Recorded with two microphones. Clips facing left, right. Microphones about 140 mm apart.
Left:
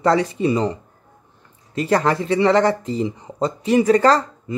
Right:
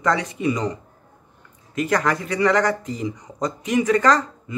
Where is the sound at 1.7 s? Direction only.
30° left (ahead or behind).